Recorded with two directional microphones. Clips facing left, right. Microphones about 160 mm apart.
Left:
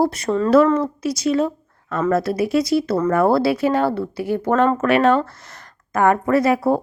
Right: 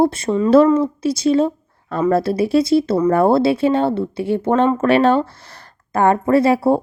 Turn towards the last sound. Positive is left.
turn(degrees=-30)  # may be behind; listen again after turning